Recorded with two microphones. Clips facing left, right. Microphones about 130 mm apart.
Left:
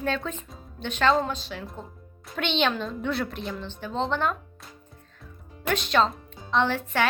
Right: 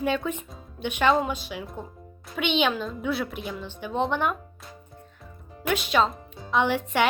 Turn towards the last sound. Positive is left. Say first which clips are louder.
# right 1 dB
turn(degrees=-15)  # may be behind; listen again after turning